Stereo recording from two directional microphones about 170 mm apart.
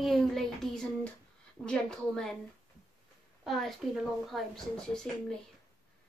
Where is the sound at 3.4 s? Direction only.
Centre (ahead or behind).